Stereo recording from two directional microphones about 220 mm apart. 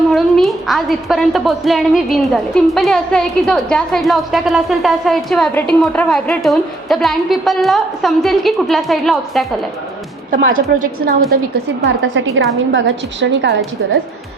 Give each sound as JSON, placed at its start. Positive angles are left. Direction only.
{"t": 0.1, "sound": "a woman's voice", "side_deg": 0}
{"t": 10.3, "sound": "a woman's voice", "side_deg": -40}
{"t": 11.8, "sound": "a woman's voice", "side_deg": -60}